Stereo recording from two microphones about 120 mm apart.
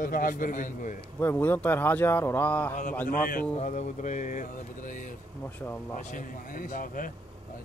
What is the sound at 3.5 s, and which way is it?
Music, 90° left.